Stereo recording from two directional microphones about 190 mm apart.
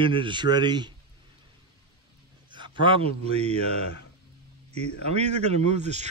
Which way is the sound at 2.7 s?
25° right (ahead or behind).